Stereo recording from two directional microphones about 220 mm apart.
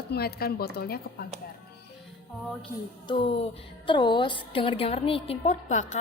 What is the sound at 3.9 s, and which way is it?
A woman's voice, 20° left (ahead or behind).